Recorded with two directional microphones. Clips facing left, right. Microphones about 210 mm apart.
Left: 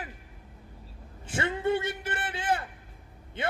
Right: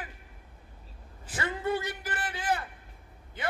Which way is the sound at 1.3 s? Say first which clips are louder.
Left 3 dB; 25° left (ahead or behind).